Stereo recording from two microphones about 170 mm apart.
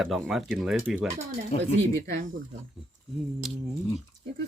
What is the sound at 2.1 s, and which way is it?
Speech, 50° right (ahead or behind).